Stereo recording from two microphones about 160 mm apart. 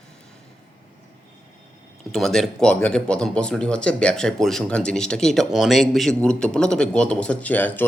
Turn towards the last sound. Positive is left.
turn(degrees=10)  # may be behind; listen again after turning